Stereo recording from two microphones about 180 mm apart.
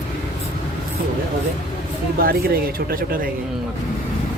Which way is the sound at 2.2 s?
60° right (ahead or behind).